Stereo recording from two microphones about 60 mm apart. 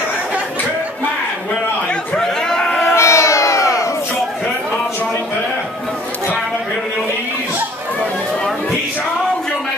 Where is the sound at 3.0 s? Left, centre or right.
Left.